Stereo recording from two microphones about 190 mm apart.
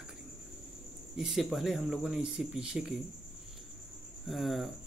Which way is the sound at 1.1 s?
Centre (ahead or behind).